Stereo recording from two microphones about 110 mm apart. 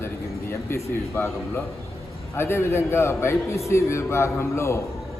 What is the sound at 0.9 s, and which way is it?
A man's voice, 25° left (ahead or behind).